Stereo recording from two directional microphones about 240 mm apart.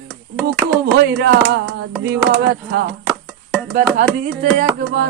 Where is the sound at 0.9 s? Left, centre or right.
Right.